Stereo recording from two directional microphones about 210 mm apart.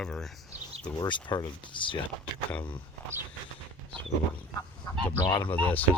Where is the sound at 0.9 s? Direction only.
20° left (ahead or behind).